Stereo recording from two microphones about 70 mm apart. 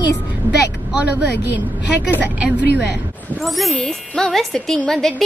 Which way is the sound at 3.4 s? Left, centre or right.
Centre.